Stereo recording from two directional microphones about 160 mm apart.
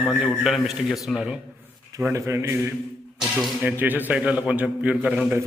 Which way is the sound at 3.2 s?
Centre (ahead or behind).